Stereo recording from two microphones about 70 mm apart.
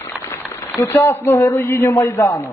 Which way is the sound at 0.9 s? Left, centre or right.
Left.